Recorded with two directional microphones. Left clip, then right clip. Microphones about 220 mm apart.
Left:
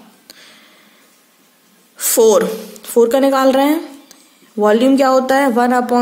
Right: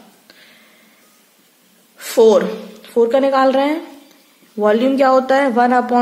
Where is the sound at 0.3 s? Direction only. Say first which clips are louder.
Left 5 dB; 25° left (ahead or behind).